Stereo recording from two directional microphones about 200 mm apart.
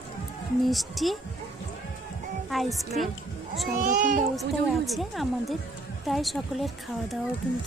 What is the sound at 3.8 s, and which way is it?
Speech, 40° right (ahead or behind).